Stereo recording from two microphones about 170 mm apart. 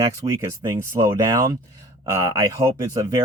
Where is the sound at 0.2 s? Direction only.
20° right (ahead or behind).